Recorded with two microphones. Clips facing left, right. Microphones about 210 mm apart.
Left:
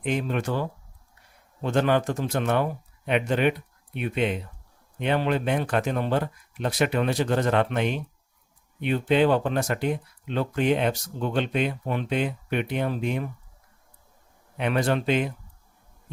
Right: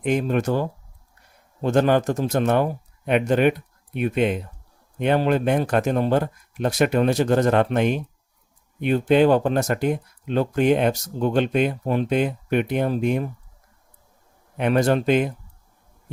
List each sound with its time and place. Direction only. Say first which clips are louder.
0.0 s speech: right 5 dB; 45° right (ahead or behind)
14.6 s speech: right 5 dB; 45° right (ahead or behind)